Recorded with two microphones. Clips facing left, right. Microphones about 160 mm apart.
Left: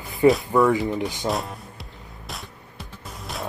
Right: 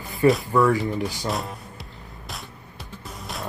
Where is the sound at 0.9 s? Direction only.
20° left (ahead or behind).